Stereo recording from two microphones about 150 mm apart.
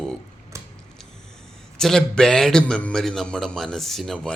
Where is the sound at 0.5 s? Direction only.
20° right (ahead or behind).